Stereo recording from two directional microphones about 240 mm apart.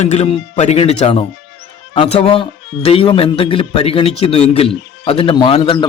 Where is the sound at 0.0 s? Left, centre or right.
Left.